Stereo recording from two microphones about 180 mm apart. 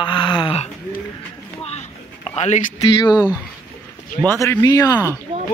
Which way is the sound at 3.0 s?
20° left (ahead or behind).